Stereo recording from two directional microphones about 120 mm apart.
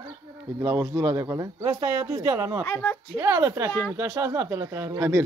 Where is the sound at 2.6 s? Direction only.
15° left (ahead or behind).